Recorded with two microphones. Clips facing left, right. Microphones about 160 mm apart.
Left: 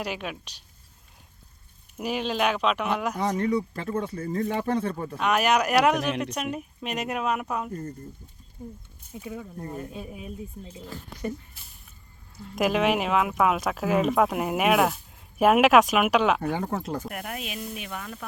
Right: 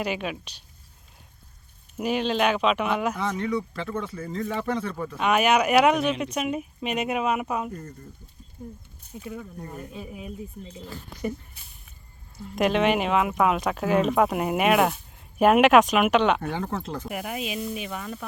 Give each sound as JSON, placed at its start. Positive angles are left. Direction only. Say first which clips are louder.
{"t": 0.0, "sound": "speech", "louder": "right 3 dB", "side_deg": 0}
{"t": 2.0, "sound": "speech", "louder": "right 3 dB", "side_deg": 0}
{"t": 3.2, "sound": "speech", "louder": "left 2 dB", "side_deg": 40}
{"t": 5.1, "sound": "speech", "louder": "right 2 dB", "side_deg": 0}
{"t": 9.2, "sound": "speech", "louder": "even", "side_deg": 15}
{"t": 10.8, "sound": "speech", "louder": "right 1 dB", "side_deg": -5}
{"t": 12.5, "sound": "speech", "louder": "right 1 dB", "side_deg": 5}
{"t": 17.1, "sound": "speech", "louder": "right 4 dB", "side_deg": -5}